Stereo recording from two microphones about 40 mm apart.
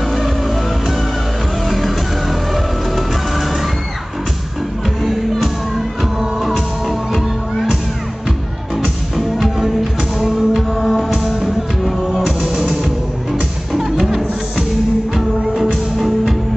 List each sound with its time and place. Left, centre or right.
1.7 s music: centre
9.1 s music: centre
10.2 s music: centre
12.3 s music: centre